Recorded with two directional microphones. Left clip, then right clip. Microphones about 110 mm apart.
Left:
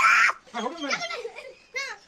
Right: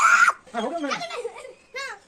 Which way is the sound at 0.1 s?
10° right (ahead or behind).